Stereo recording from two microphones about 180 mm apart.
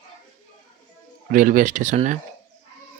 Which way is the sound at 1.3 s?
50° right (ahead or behind).